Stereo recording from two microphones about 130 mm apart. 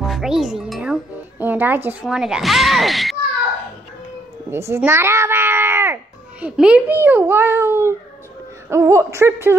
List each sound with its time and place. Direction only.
0.1 s a child's voice: 5° right (ahead or behind)
1.4 s a child's voice: 15° right (ahead or behind)
2.0 s a child's voice: 5° right (ahead or behind)
4.5 s speech: 20° right (ahead or behind)
6.4 s a child's voice: 10° right (ahead or behind)